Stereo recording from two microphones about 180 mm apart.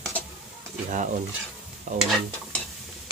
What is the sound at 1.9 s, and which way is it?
Stir, 45° right (ahead or behind).